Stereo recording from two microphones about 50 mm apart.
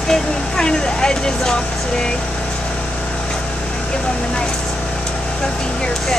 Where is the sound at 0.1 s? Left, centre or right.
Centre.